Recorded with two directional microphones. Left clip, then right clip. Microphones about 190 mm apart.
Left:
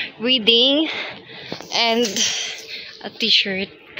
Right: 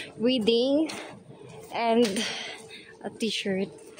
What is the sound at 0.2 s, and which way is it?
Speech, 10° right (ahead or behind).